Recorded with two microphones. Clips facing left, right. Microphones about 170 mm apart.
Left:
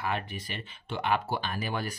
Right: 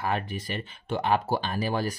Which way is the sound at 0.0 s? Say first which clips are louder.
Right 4 dB; 40° right (ahead or behind).